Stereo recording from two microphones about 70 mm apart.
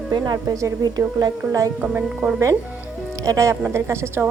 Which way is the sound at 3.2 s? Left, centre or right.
Right.